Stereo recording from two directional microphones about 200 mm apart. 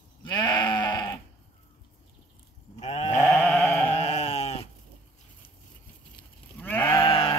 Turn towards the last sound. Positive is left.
turn(degrees=25)  # may be behind; listen again after turning